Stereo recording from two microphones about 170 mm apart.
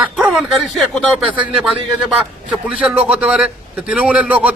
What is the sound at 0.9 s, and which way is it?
A man's voice, 5° right (ahead or behind).